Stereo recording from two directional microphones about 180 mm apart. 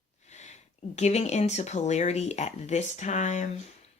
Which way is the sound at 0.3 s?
40° left (ahead or behind).